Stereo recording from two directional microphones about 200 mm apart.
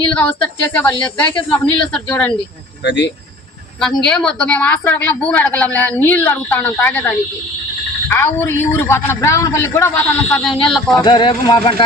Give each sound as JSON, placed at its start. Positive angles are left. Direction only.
{"t": 0.1, "sound": "a woman's voice", "side_deg": 10}
{"t": 2.8, "sound": "speech", "side_deg": 65}
{"t": 3.8, "sound": "a woman's voice", "side_deg": 5}
{"t": 8.1, "sound": "a woman's voice", "side_deg": 10}
{"t": 10.3, "sound": "a sound", "side_deg": 0}
{"t": 11.0, "sound": "speech", "side_deg": 25}